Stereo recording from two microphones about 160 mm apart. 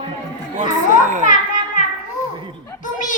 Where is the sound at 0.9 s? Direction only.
50° right (ahead or behind).